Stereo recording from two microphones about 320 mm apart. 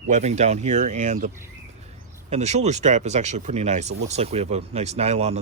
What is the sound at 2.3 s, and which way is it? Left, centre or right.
Speech, right.